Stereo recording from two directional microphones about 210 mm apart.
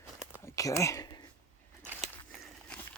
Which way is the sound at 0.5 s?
15° left (ahead or behind).